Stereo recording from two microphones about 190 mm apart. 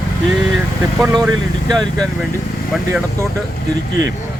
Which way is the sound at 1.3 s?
20° right (ahead or behind).